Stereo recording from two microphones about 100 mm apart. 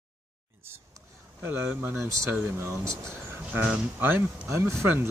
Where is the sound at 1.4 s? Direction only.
25° right (ahead or behind).